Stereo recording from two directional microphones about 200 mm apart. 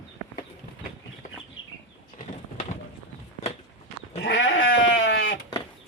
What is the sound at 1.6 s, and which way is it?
Chicken, 85° left.